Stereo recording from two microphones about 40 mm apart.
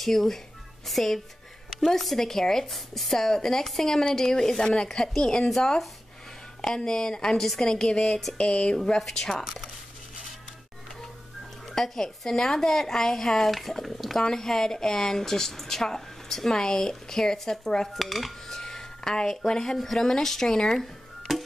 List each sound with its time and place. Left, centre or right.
0.0 s speech: centre
5.5 s speech: centre
7.3 s speech: centre
7.6 s speech: centre
8.4 s speech: left
9.0 s speech: centre
11.7 s speech: centre
17.8 s speech: centre
18.6 s speech: centre
21.3 s music: centre